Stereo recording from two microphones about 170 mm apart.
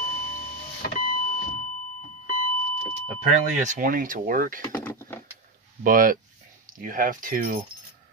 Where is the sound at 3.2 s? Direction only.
45° right (ahead or behind).